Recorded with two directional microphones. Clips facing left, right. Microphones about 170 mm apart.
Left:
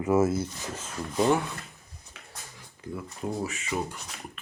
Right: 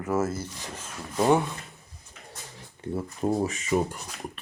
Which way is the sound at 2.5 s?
30° right (ahead or behind).